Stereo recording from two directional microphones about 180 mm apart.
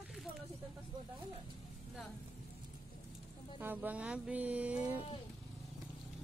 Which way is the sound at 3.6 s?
10° right (ahead or behind).